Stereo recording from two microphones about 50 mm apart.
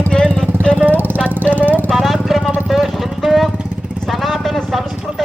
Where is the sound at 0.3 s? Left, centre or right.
Centre.